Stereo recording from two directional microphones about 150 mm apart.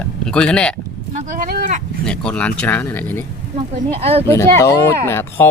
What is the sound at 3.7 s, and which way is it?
Speech, 40° right (ahead or behind).